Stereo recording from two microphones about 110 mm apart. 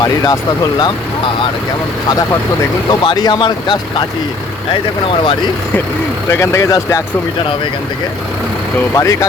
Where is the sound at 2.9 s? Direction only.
40° left (ahead or behind).